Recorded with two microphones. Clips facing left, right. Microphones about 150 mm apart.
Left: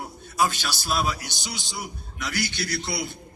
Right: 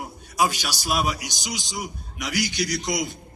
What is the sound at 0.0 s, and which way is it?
A man's voice, 10° right (ahead or behind).